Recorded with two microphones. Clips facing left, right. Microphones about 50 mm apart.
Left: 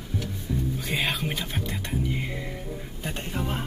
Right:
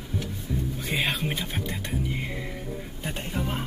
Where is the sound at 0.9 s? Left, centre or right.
Centre.